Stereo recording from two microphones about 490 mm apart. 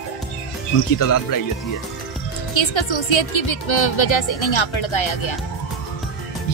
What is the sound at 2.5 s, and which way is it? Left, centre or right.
A woman's voice, left.